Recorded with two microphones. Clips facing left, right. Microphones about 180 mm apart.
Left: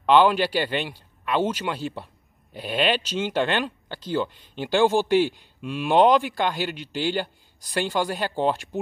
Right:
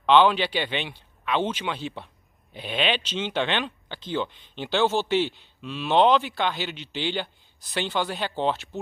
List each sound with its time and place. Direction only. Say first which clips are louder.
0.0 s speech: left 1 dB; 10° left (ahead or behind)